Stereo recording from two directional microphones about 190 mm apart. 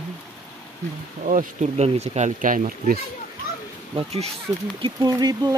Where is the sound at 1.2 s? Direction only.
40° right (ahead or behind).